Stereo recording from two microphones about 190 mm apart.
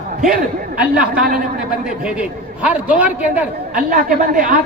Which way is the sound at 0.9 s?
45° right (ahead or behind).